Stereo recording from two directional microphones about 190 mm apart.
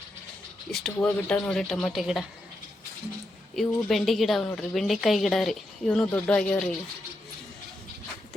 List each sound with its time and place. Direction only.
0.7 s a woman's voice: centre (ahead or behind)
3.5 s a woman's voice: centre (ahead or behind)